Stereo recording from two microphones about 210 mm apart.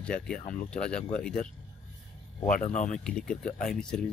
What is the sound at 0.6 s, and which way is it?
Speech, 5° left (ahead or behind).